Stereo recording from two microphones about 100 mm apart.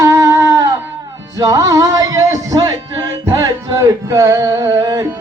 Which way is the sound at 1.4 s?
35° right (ahead or behind).